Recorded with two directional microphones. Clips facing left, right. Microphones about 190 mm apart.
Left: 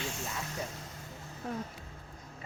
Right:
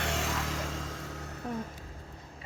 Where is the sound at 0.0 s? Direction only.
85° right.